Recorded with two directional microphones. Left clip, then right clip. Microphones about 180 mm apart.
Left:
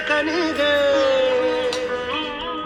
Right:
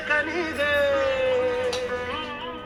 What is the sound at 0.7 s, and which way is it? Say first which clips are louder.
Music: left 4 dB; 35° left (ahead or behind).